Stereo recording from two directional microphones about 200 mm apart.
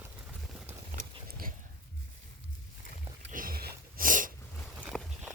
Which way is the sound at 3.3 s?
45° right (ahead or behind).